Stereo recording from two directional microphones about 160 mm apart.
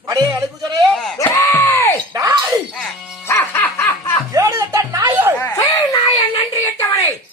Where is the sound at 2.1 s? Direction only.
20° right (ahead or behind).